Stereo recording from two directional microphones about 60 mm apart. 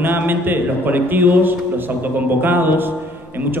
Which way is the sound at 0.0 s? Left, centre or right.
Right.